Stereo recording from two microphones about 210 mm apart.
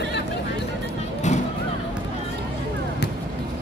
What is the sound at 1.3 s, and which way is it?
Vehicle, 35° left (ahead or behind).